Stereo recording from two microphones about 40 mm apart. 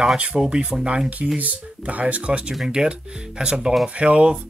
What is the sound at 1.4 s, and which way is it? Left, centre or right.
Speech, right.